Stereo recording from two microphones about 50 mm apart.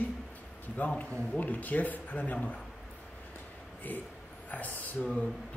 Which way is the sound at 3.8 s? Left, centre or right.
Left.